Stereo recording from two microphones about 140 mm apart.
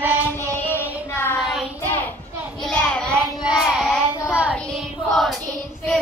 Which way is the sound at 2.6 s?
5° left (ahead or behind).